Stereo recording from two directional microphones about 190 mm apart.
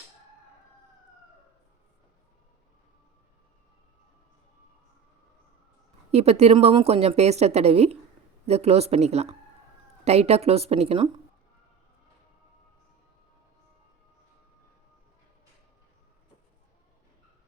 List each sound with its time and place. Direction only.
6.1 s speech: 35° right (ahead or behind)